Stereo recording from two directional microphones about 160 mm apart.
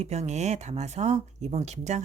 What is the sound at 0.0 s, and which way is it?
Speech, 45° right (ahead or behind).